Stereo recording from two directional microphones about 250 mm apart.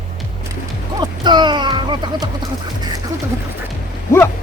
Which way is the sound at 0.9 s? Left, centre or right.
Centre.